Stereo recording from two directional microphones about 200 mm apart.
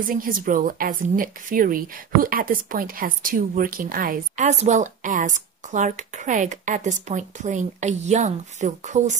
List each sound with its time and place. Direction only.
0.0 s a woman's voice: 45° right (ahead or behind)